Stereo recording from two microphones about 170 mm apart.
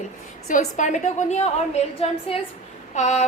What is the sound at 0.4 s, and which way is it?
A woman's voice, 45° left (ahead or behind).